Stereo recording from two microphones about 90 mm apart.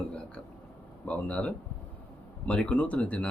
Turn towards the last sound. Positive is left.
turn(degrees=15)  # may be behind; listen again after turning